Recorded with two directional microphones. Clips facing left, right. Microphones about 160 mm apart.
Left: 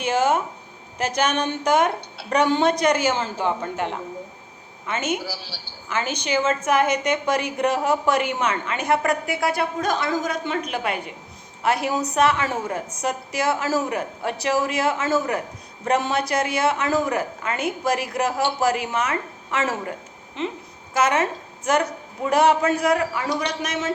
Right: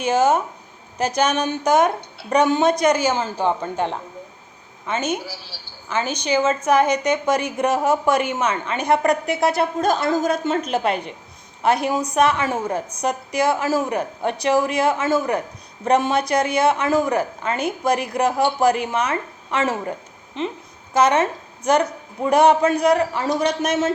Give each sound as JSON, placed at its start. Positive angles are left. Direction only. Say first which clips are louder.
{"t": 0.0, "sound": "speech", "louder": "right 3 dB", "side_deg": -15}
{"t": 4.9, "sound": "a woman's voice", "louder": "right 2 dB", "side_deg": -25}
{"t": 5.9, "sound": "a woman's voice", "louder": "right 3 dB", "side_deg": -15}
{"t": 10.0, "sound": "a woman's voice", "louder": "right 5 dB", "side_deg": -45}
{"t": 11.6, "sound": "speech", "louder": "right 3 dB", "side_deg": -20}
{"t": 17.1, "sound": "a woman's voice", "louder": "right 3 dB", "side_deg": -30}
{"t": 20.9, "sound": "a woman's voice", "louder": "right 4 dB", "side_deg": -20}
{"t": 23.1, "sound": "a woman's voice", "louder": "right 5 dB", "side_deg": -45}